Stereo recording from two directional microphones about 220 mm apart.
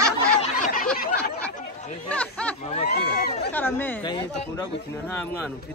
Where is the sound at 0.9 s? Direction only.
40° left (ahead or behind).